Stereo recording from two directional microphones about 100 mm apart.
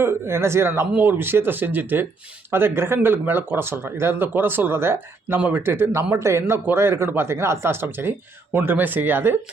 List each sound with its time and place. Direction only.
0.0 s speech: 25° right (ahead or behind)